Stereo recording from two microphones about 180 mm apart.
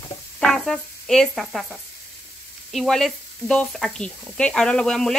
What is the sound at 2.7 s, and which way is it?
Speech, centre (ahead or behind).